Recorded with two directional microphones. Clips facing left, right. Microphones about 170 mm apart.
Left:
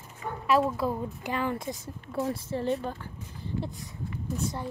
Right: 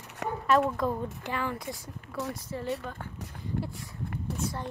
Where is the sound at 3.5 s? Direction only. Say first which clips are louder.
Even; 55° right (ahead or behind).